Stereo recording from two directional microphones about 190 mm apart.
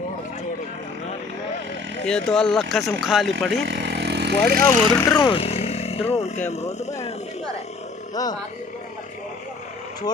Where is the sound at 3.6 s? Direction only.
60° right (ahead or behind).